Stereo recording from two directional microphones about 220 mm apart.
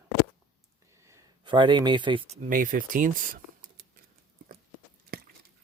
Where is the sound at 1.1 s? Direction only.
20° right (ahead or behind).